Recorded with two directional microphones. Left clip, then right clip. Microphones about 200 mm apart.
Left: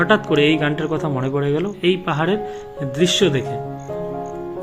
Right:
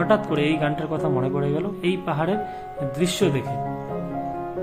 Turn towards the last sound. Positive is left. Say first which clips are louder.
# left 6 dB
turn(degrees=5)  # may be behind; listen again after turning